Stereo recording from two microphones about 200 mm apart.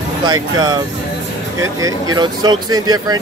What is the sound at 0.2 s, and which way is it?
Speech, 20° right (ahead or behind).